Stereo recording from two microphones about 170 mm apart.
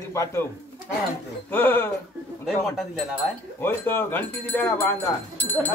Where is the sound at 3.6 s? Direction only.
15° left (ahead or behind).